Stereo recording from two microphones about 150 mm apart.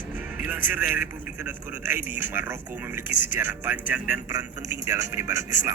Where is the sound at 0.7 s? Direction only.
10° right (ahead or behind).